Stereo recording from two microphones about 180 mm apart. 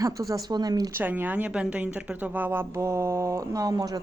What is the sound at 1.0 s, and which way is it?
Speech, 10° right (ahead or behind).